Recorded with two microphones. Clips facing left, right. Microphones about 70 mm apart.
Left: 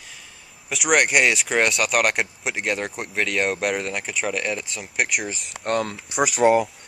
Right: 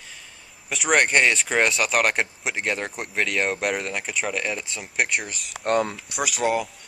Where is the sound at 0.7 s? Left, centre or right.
Centre.